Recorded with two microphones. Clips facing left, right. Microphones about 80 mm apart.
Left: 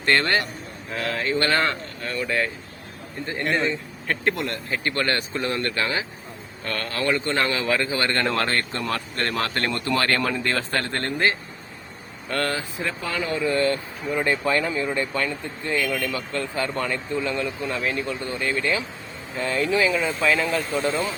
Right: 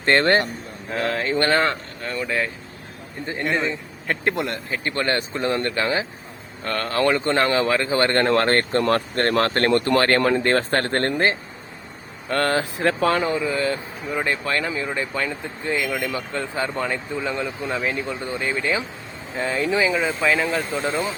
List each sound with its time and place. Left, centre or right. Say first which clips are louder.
0.0 s speech: right 4 dB; right
2.2 s a man's voice: even; centre
4.1 s speech: right 1 dB; centre; by 11.2 s right
12.3 s speech: right 4 dB; right
12.5 s speech: right 8 dB; right
13.2 s a man's voice: right 2 dB; centre
13.5 s a man's voice: left 1 dB; centre
17.7 s a man's voice: right 2 dB; centre
18.0 s a man's voice: right 1 dB; centre